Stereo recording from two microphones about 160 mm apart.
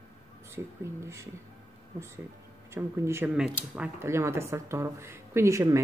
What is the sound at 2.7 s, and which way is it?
Speech, 15° right (ahead or behind).